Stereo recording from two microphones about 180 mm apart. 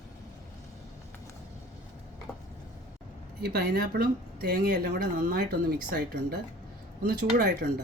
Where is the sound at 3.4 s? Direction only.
65° right (ahead or behind).